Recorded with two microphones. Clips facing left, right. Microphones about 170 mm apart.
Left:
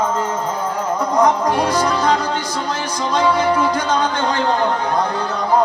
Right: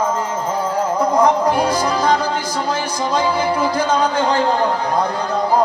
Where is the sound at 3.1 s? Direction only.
30° right (ahead or behind).